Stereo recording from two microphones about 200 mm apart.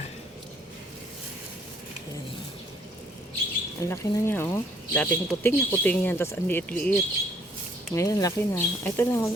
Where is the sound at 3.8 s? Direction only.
15° left (ahead or behind).